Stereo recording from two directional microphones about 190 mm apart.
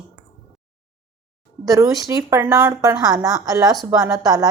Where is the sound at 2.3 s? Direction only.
15° right (ahead or behind).